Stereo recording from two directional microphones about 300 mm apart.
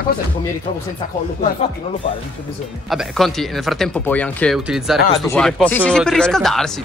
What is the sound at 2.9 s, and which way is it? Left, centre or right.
Speech, centre.